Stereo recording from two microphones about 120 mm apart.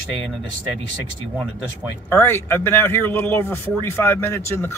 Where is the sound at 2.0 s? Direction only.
15° left (ahead or behind).